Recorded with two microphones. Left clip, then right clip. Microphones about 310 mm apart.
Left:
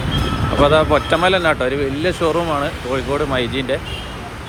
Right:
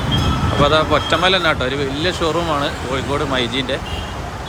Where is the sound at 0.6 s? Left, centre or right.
Centre.